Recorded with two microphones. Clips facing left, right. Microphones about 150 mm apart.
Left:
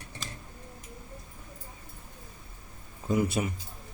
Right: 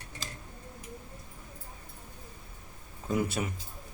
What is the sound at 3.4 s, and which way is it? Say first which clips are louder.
Speech: left 3 dB; 15° left (ahead or behind).